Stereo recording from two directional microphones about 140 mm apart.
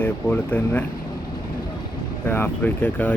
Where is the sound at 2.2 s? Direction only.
15° left (ahead or behind).